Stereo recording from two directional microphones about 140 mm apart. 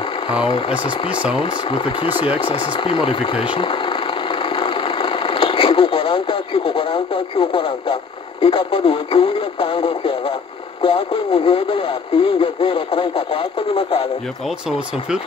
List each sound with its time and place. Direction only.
0.4 s speech: 40° left (ahead or behind)